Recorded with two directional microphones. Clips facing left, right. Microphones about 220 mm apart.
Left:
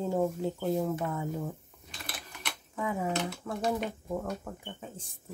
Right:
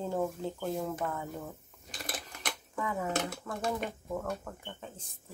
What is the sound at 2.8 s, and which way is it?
Speech, 15° left (ahead or behind).